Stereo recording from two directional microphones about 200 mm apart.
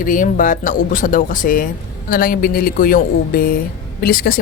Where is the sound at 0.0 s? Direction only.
40° left (ahead or behind).